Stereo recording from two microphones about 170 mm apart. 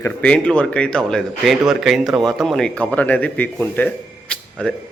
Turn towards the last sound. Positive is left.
turn(degrees=5)  # may be behind; listen again after turning